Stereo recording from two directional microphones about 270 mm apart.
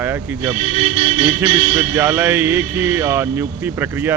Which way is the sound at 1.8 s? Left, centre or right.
Centre.